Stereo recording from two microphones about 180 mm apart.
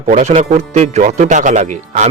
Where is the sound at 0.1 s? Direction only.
35° right (ahead or behind).